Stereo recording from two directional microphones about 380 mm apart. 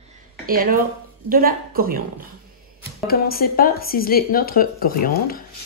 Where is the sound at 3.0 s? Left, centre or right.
Left.